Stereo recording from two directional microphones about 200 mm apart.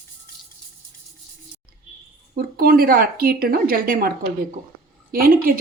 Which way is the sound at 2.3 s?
50° right (ahead or behind).